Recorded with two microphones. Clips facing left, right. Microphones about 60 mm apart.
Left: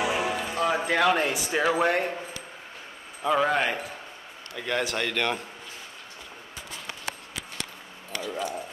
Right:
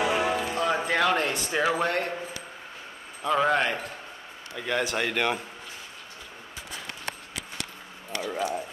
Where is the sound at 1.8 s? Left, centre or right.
Centre.